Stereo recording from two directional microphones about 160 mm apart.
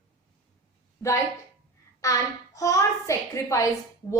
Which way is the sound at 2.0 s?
20° left (ahead or behind).